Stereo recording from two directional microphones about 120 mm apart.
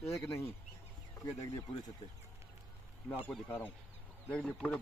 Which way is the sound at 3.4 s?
15° left (ahead or behind).